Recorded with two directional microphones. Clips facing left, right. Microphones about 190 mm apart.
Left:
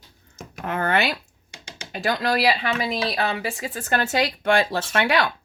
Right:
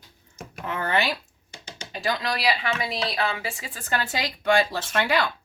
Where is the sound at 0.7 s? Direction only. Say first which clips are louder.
Left 3 dB; 55° left (ahead or behind).